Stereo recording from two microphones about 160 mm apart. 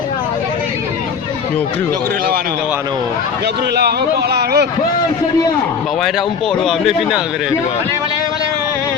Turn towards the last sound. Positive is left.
turn(degrees=0)  # may be behind; listen again after turning